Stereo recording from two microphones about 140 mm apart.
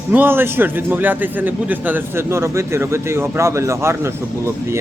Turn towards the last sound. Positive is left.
turn(degrees=-20)  # may be behind; listen again after turning